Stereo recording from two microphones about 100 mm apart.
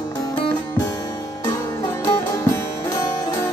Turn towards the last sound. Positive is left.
turn(degrees=35)  # may be behind; listen again after turning